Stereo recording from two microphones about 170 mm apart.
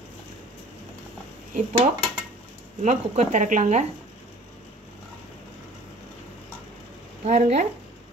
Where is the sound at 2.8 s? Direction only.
45° right (ahead or behind).